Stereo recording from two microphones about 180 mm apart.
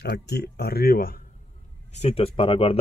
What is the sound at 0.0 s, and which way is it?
Speech, 70° left (ahead or behind).